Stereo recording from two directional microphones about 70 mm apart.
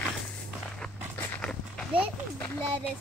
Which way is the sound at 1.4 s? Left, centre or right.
Centre.